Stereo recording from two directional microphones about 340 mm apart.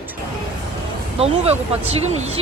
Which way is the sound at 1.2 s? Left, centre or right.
Centre.